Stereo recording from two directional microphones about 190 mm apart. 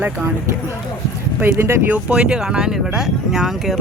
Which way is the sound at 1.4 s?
10° right (ahead or behind).